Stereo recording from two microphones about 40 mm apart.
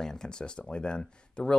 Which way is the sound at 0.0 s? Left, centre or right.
Centre.